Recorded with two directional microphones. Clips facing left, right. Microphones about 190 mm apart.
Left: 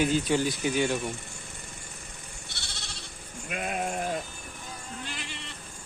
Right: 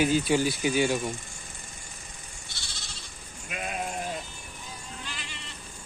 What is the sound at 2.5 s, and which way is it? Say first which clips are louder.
Goat: left 2 dB; 65° left (ahead or behind).